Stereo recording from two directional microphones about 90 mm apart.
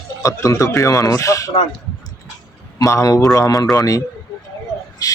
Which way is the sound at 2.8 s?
40° left (ahead or behind).